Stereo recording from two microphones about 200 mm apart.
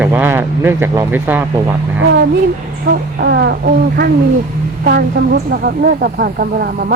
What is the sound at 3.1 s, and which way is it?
Speech, 60° right (ahead or behind).